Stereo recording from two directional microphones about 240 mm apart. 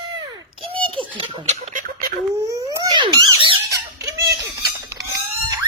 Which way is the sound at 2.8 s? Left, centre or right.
Centre.